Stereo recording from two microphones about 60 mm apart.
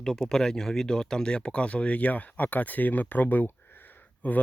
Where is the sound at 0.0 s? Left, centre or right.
Centre.